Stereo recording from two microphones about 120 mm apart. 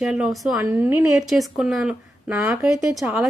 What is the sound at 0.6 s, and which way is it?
Speech, 15° right (ahead or behind).